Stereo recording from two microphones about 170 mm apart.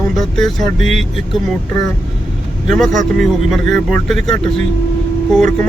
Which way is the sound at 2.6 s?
Centre (ahead or behind).